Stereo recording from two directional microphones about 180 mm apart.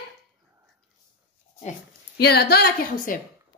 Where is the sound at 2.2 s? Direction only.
60° left (ahead or behind).